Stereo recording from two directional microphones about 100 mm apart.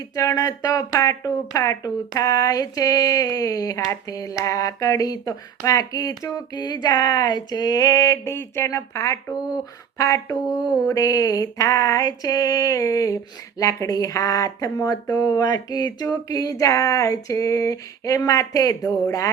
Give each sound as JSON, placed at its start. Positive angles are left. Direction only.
{"t": 0.2, "sound": "speech", "side_deg": 35}